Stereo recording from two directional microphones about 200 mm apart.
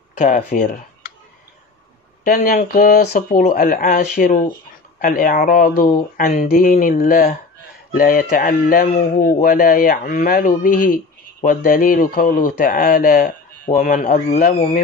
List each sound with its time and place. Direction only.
0.2 s speech: 45° left (ahead or behind)
2.2 s a man's voice: 45° left (ahead or behind)
8.8 s a man's voice: 35° left (ahead or behind)
9.3 s a man's voice: 45° left (ahead or behind)